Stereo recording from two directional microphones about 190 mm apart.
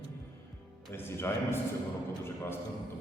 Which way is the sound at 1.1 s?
10° left (ahead or behind).